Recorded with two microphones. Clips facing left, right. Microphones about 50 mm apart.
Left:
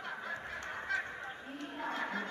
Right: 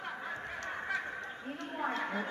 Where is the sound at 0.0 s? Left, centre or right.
Centre.